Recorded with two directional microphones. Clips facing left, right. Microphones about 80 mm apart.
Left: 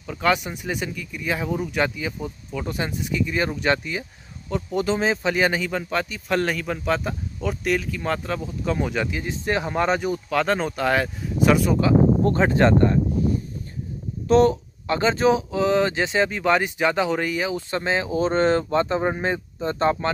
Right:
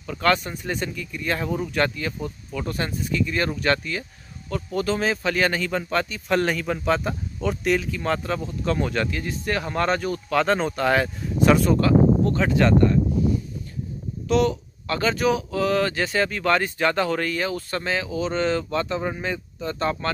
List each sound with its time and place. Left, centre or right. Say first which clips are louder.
0.0 s speech: even; centre
10.3 s speech: right 2 dB; centre
12.3 s speech: left 2 dB; left
14.2 s speech: left 4 dB; left
14.9 s speech: left 3 dB; left